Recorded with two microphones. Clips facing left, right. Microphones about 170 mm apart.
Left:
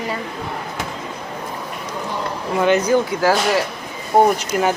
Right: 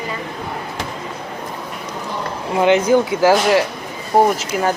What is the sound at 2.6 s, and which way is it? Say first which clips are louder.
Speech: right 2 dB; 20° right (ahead or behind).